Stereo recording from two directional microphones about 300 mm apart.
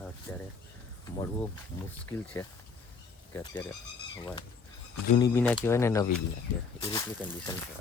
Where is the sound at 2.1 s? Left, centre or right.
Centre.